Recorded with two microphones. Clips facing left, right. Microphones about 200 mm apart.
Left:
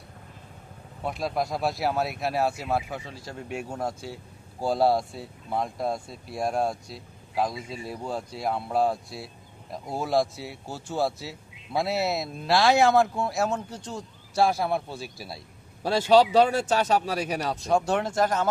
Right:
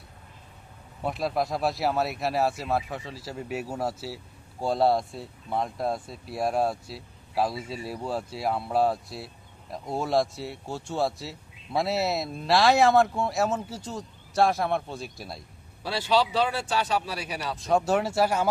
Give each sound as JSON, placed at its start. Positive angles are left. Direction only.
{"t": 1.0, "sound": "speech", "side_deg": 0}
{"t": 15.8, "sound": "a man's voice", "side_deg": 45}
{"t": 17.6, "sound": "speech", "side_deg": 0}